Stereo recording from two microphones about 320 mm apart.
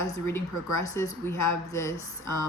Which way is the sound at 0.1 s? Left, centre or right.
Centre.